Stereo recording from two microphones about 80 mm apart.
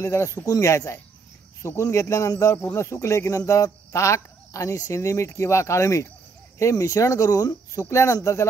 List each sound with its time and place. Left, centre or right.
0.0 s speech: left